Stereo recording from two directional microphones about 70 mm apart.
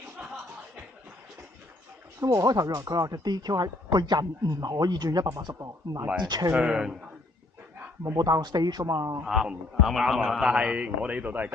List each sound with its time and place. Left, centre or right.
2.2 s speech: right
4.4 s speech: right
5.5 s speech: right
6.1 s speech: right
6.5 s a man's voice: centre
8.1 s speech: right
8.8 s speech: right
9.2 s a man's voice: centre; by 11.5 s right